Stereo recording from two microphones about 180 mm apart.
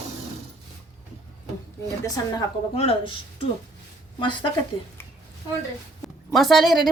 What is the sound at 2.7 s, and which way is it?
Speech, 35° left (ahead or behind).